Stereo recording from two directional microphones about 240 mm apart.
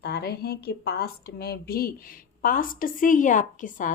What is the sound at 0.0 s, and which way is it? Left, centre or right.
A woman's voice, left.